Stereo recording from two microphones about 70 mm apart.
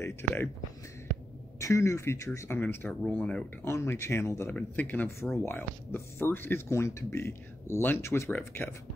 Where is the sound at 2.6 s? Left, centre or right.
Left.